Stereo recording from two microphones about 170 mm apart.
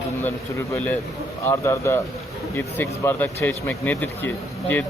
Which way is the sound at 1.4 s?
15° left (ahead or behind).